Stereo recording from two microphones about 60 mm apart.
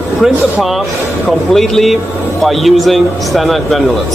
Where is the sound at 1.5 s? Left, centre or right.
Centre.